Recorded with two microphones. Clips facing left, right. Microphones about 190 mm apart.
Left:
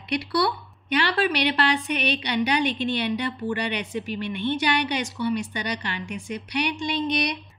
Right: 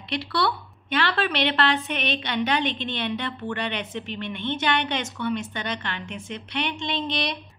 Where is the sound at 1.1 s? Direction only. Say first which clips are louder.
Left 2 dB; 10° left (ahead or behind).